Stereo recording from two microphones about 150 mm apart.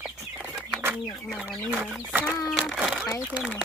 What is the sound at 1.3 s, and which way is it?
Speech, 5° right (ahead or behind).